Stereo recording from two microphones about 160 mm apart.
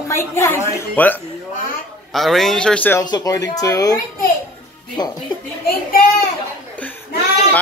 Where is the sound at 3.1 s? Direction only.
25° left (ahead or behind).